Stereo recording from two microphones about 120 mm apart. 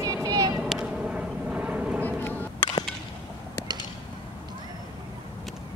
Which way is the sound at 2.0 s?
15° left (ahead or behind).